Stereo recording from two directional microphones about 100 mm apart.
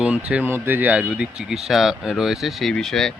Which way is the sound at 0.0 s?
10° right (ahead or behind).